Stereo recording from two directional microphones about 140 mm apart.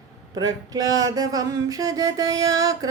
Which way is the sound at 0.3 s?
25° right (ahead or behind).